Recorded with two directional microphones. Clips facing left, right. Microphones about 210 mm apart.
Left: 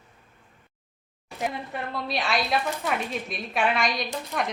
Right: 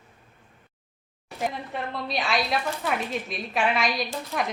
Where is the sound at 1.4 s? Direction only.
Centre (ahead or behind).